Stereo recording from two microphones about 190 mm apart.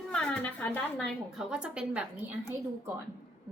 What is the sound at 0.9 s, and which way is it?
Speech, centre (ahead or behind).